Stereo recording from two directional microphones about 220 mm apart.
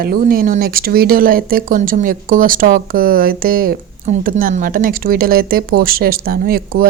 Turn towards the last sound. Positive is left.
turn(degrees=-45)  # may be behind; listen again after turning